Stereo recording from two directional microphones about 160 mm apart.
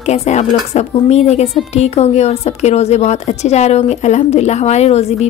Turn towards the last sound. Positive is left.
turn(degrees=40)  # may be behind; listen again after turning